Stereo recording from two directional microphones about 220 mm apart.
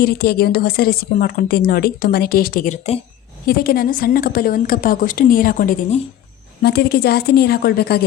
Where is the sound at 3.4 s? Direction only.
40° left (ahead or behind).